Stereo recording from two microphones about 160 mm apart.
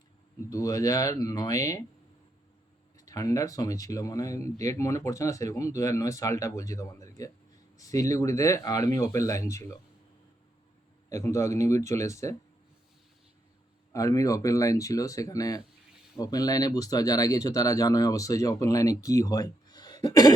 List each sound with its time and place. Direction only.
0.5 s speech: 20° left (ahead or behind)
3.1 s speech: 20° left (ahead or behind)
11.1 s speech: 20° left (ahead or behind)
13.9 s speech: 20° left (ahead or behind)